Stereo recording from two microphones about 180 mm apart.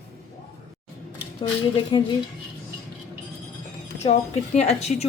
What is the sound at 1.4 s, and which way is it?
Speech, 25° left (ahead or behind).